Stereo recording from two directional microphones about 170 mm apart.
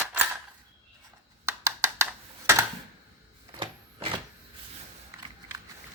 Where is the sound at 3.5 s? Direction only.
30° right (ahead or behind).